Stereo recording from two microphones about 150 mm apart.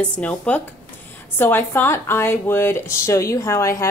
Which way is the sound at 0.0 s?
10° left (ahead or behind).